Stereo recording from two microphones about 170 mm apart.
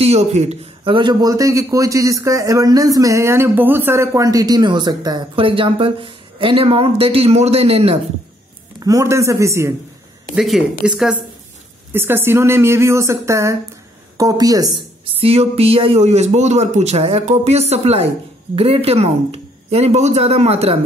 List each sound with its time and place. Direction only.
0.0 s a man's voice: 40° right (ahead or behind)
8.7 s speech: 20° right (ahead or behind)
10.3 s a man's voice: 5° right (ahead or behind); by 14.8 s 20° right (ahead or behind)
15.1 s a man's voice: 35° right (ahead or behind)